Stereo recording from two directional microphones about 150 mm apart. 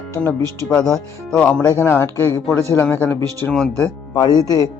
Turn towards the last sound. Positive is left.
turn(degrees=25)  # may be behind; listen again after turning